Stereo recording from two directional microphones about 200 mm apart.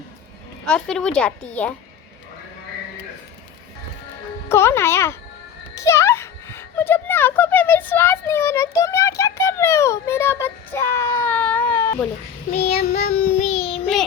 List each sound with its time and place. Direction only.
0.6 s a woman's voice: 5° left (ahead or behind)
4.4 s a child's voice: 10° left (ahead or behind)
12.6 s child singing: 30° left (ahead or behind)
13.1 s child singing: 50° left (ahead or behind)
13.5 s child singing: 30° left (ahead or behind)